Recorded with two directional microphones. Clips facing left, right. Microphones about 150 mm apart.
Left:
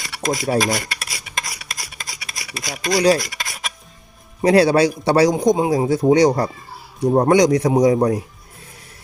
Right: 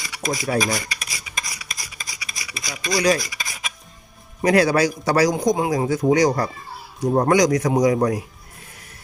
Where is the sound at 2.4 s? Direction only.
55° left (ahead or behind).